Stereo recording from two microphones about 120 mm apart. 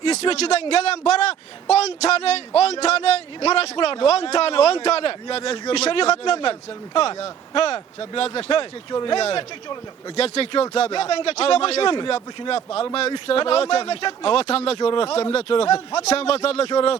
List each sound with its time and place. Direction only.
0.0 s a man's voice: 55° left (ahead or behind)
5.7 s a man's voice: 60° left (ahead or behind)
14.8 s speech: 45° left (ahead or behind)
16.0 s a man's voice: 60° left (ahead or behind)